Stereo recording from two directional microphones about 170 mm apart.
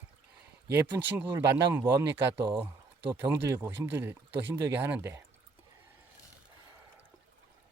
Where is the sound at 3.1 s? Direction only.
15° right (ahead or behind).